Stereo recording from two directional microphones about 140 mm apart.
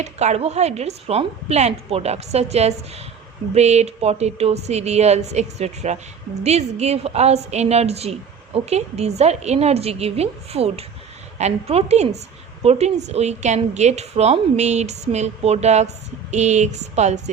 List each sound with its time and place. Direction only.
0.0 s a woman's voice: 55° right (ahead or behind)